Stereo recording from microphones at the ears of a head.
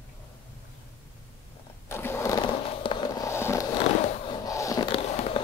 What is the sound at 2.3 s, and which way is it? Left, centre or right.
Fireworks, left.